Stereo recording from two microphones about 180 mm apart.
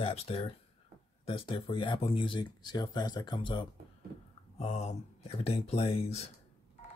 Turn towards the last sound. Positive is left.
turn(degrees=35)  # may be behind; listen again after turning